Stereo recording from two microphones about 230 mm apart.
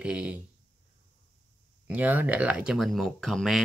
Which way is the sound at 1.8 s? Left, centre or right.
Centre.